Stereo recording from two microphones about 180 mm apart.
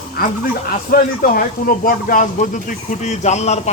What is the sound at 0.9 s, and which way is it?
Speech, 55° left (ahead or behind).